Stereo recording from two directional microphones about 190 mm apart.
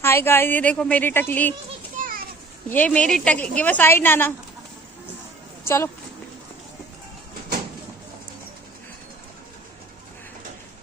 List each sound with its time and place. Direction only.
0.0 s a woman's voice: 10° left (ahead or behind)
2.0 s children playing: 40° right (ahead or behind)
2.7 s a woman's voice: 10° left (ahead or behind)